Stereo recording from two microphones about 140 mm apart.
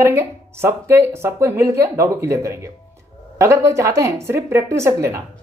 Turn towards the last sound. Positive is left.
turn(degrees=-20)  # may be behind; listen again after turning